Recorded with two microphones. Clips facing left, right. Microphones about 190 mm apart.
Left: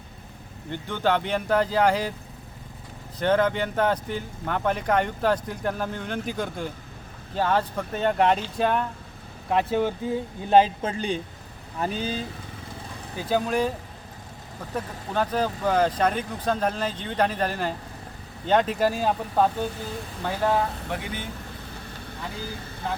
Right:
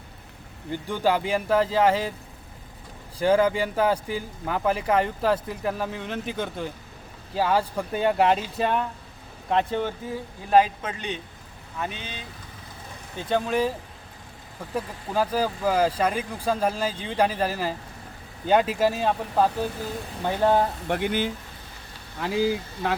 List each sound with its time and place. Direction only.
0.7 s speech: 10° right (ahead or behind)
3.2 s speech: 10° right (ahead or behind); by 9.9 s 10° left (ahead or behind)
10.5 s speech: 30° left (ahead or behind)
13.1 s speech: 5° left (ahead or behind)
15.1 s speech: 5° right (ahead or behind)
20.2 s speech: 25° right (ahead or behind)
20.9 s speech: 65° right (ahead or behind)
22.2 s speech: 85° right